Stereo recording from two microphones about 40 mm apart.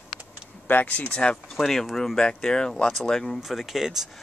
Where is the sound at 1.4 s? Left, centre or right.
Centre.